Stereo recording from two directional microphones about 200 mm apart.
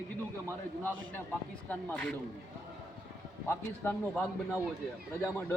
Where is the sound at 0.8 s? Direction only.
10° left (ahead or behind).